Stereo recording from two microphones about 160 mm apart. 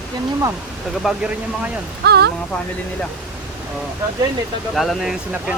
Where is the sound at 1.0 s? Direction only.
5° right (ahead or behind).